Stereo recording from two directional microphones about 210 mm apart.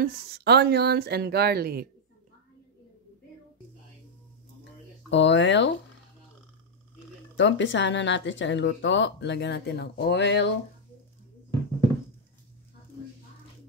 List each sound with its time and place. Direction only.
0.0 s speech: 50° right (ahead or behind)
5.1 s speech: 60° left (ahead or behind)
7.3 s speech: 60° left (ahead or behind)